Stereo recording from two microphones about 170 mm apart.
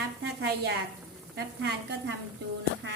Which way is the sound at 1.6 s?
80° right.